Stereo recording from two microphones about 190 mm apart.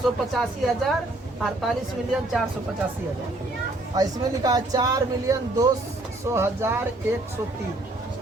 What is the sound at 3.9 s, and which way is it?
Speech, 20° right (ahead or behind).